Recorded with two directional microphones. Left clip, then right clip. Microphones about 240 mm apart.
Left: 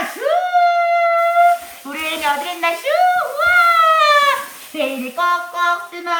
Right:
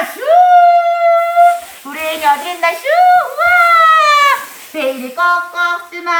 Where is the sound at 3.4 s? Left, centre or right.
Centre.